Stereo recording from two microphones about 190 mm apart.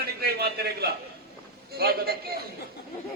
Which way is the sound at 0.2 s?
55° right (ahead or behind).